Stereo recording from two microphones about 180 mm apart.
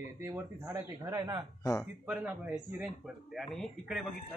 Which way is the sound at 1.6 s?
15° left (ahead or behind).